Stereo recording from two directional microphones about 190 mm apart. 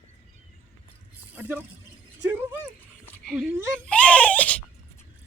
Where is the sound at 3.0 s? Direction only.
10° left (ahead or behind).